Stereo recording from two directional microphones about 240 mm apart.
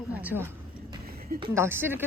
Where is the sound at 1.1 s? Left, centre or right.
Right.